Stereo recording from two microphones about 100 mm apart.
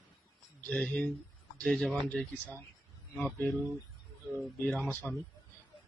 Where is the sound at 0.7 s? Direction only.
10° left (ahead or behind).